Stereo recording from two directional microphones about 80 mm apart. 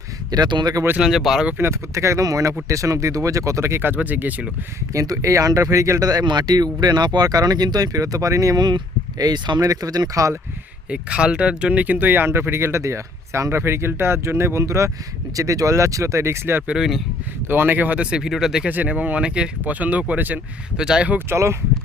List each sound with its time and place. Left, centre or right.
0.3 s speech: right
0.9 s speech: centre
1.5 s speech: right
4.9 s speech: right
10.8 s speech: centre; by 16.6 s right
16.6 s speech: centre
17.5 s speech: right; by 18.7 s centre
18.7 s speech: centre
20.7 s speech: centre
21.2 s speech: right